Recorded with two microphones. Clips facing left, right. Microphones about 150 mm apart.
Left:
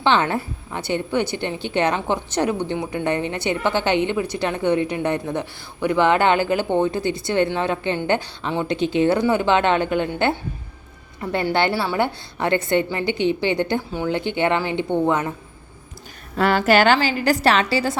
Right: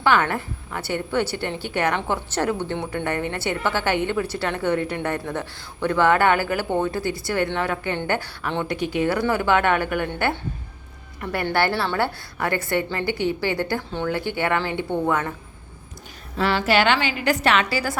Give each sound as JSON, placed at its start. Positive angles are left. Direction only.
{"t": 0.0, "sound": "a woman's voice", "side_deg": 20}
{"t": 11.2, "sound": "a woman's voice", "side_deg": 25}
{"t": 16.4, "sound": "a woman's voice", "side_deg": 50}